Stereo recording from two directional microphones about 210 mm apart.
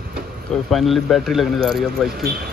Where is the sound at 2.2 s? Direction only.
45° right (ahead or behind).